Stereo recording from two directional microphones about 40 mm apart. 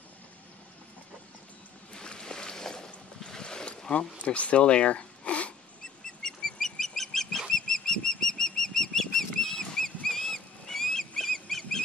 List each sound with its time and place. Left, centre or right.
2.0 s a sound: centre
4.2 s speech: left
6.2 s bird flight: centre